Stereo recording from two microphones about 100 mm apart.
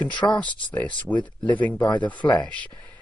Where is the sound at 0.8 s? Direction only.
15° left (ahead or behind).